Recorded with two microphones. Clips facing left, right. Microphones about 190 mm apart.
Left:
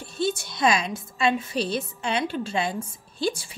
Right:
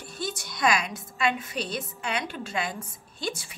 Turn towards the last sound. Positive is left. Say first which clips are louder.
# left 6 dB
turn(degrees=30)  # may be behind; listen again after turning